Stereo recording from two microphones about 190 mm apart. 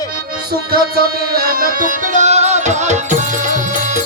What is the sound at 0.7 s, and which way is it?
Music, 55° right (ahead or behind).